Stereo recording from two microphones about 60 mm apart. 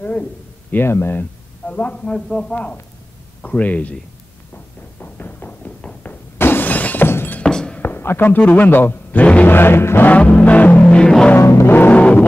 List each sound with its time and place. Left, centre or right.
0.7 s speech: left
1.7 s a man's voice: left
2.1 s a man's voice: centre
2.5 s music: left
5.0 s a sound: left
6.3 s shatter: left
7.1 s music: left
7.4 s a sound: centre
7.8 s speech: left
9.2 s a sound: left
9.5 s speech: left
10.0 s music: left
11.3 s music: left
11.7 s music: left